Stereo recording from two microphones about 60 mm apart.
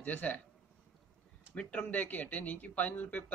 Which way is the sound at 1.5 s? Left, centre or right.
Left.